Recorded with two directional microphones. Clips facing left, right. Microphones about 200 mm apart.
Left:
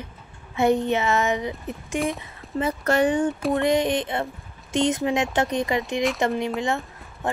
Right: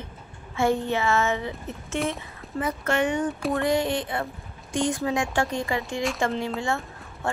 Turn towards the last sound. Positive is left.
turn(degrees=15)  # may be behind; listen again after turning